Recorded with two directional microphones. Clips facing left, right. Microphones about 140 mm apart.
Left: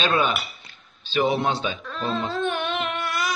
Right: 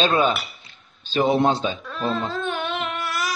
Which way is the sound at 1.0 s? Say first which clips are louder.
Right 2 dB; 45° right (ahead or behind).